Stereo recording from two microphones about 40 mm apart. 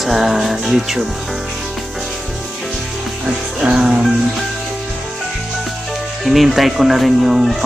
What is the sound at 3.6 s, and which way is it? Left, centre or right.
Music, right.